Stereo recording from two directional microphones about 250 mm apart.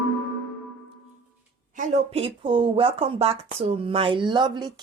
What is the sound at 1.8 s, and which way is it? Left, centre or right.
A woman's voice, right.